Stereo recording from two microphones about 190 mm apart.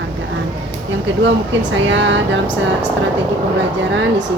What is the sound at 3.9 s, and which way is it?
Speech, 75° right (ahead or behind).